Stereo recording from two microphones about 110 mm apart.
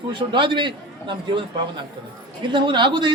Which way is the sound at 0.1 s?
50° right (ahead or behind).